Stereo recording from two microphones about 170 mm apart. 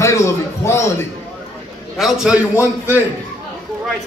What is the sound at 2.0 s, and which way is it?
A man's voice, centre (ahead or behind).